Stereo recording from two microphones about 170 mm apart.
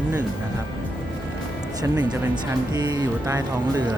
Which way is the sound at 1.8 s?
25° right (ahead or behind).